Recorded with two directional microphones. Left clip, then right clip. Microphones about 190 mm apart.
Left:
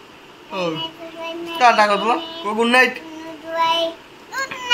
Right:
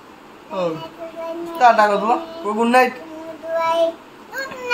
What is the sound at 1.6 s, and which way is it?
Speech, 10° left (ahead or behind).